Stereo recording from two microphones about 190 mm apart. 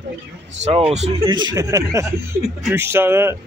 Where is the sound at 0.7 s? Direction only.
35° right (ahead or behind).